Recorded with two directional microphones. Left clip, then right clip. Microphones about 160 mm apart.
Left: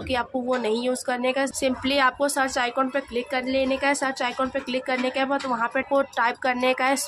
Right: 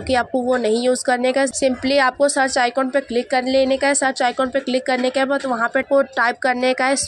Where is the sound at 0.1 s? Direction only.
30° right (ahead or behind).